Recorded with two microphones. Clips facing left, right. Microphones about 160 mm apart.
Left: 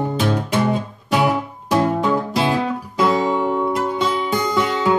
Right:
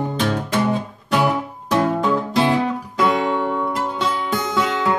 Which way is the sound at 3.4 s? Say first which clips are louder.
Left 2 dB; 15° left (ahead or behind).